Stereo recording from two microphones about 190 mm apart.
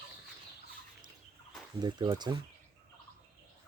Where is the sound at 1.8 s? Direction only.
20° right (ahead or behind).